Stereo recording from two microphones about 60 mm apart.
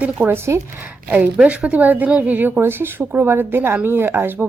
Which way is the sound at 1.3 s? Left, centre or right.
Centre.